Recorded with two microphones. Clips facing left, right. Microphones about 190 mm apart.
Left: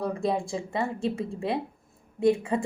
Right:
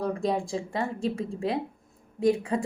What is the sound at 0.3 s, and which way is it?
A woman's voice, 5° left (ahead or behind).